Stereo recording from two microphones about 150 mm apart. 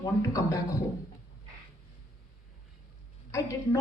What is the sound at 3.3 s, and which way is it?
Speech, 20° left (ahead or behind).